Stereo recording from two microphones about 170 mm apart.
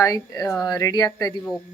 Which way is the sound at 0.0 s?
20° left (ahead or behind).